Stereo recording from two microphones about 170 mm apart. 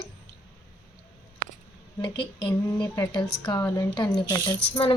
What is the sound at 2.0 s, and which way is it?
Speech, 25° left (ahead or behind).